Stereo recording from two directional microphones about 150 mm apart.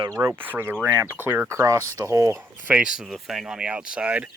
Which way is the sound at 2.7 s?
5° right (ahead or behind).